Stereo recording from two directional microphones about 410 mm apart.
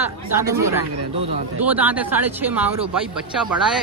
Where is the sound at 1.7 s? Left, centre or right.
Centre.